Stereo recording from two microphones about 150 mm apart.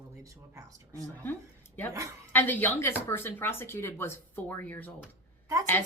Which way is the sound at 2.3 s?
15° left (ahead or behind).